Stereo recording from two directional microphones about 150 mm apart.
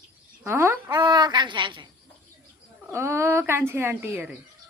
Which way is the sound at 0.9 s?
25° right (ahead or behind).